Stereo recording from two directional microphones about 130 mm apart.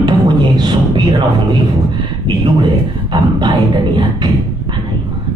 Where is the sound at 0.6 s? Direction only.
35° right (ahead or behind).